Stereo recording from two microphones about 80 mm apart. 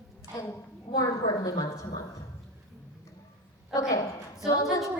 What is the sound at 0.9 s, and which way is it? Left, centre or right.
A woman's voice, left.